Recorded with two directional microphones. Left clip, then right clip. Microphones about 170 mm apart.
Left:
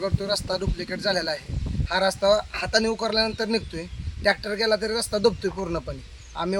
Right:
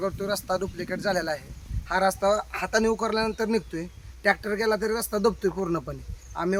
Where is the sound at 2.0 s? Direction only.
35° right (ahead or behind).